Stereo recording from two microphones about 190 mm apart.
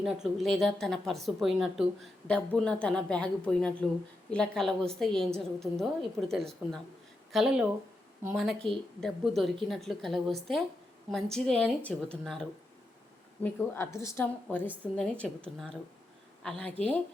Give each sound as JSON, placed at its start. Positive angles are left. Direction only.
{"t": 0.0, "sound": "a woman's voice", "side_deg": 0}